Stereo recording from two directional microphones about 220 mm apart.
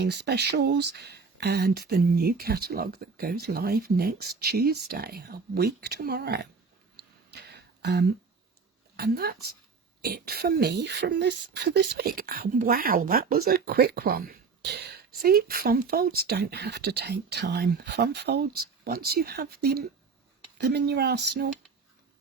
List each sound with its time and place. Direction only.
0.0 s speech: 50° right (ahead or behind)
7.3 s a sound: 50° right (ahead or behind)
9.0 s speech: 45° right (ahead or behind)